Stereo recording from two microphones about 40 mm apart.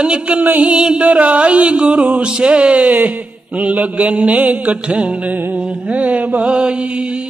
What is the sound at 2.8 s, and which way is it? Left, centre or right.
Mantra, right.